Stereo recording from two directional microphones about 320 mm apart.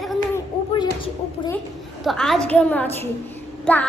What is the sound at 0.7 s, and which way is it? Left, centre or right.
Speech, centre.